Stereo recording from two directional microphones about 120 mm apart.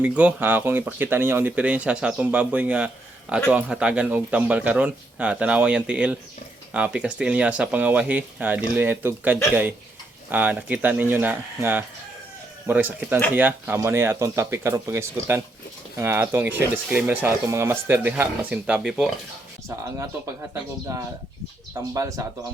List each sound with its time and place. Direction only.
0.0 s speech: 10° right (ahead or behind)
17.4 s speech: 25° right (ahead or behind); by 19.0 s 5° right (ahead or behind)
19.6 s speech: 25° right (ahead or behind)